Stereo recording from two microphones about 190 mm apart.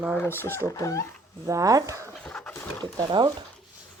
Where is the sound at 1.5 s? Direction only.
15° right (ahead or behind).